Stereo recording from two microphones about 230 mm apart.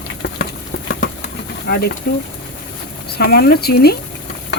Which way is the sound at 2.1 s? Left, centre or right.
Left.